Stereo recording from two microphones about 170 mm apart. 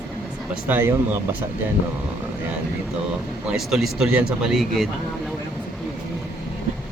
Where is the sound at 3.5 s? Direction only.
Centre (ahead or behind).